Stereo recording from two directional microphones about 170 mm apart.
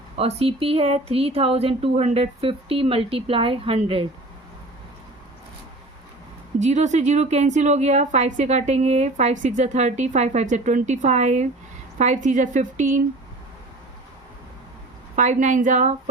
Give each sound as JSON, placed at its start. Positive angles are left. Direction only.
{"t": 0.2, "sound": "speech", "side_deg": -35}
{"t": 6.6, "sound": "a woman's voice", "side_deg": -40}
{"t": 15.1, "sound": "a woman's voice", "side_deg": -45}